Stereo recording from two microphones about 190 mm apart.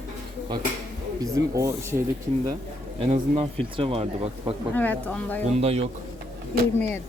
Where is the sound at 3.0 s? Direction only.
35° right (ahead or behind).